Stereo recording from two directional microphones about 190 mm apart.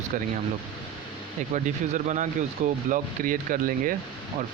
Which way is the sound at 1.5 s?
40° right (ahead or behind).